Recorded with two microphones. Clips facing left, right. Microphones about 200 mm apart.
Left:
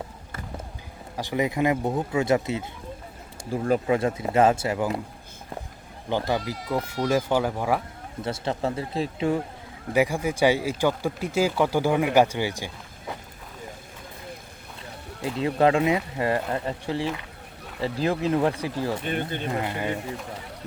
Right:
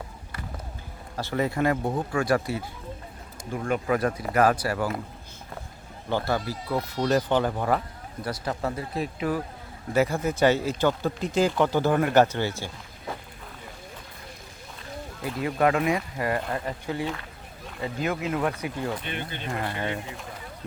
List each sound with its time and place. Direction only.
1.1 s speech: 15° left (ahead or behind)
3.5 s speech: 35° left (ahead or behind)
6.1 s speech: 15° left (ahead or behind)
8.2 s speech: 25° left (ahead or behind)
9.9 s speech: 15° left (ahead or behind)
15.2 s speech: 25° left (ahead or behind)
19.0 s speech: 45° left (ahead or behind)
19.5 s speech: 15° left (ahead or behind)